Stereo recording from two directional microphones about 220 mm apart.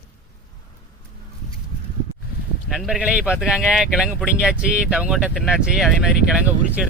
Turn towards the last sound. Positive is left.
turn(degrees=-5)  # may be behind; listen again after turning